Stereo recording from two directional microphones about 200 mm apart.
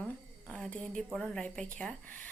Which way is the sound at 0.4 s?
5° left (ahead or behind).